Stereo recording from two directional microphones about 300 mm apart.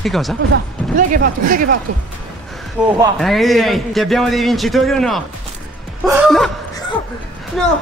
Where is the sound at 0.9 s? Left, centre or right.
Right.